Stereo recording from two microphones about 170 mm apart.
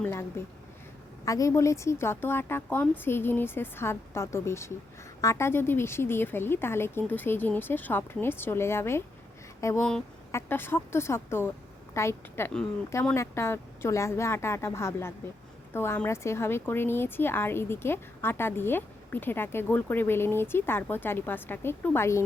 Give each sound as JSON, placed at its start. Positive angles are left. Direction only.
{"t": 0.0, "sound": "speech", "side_deg": 15}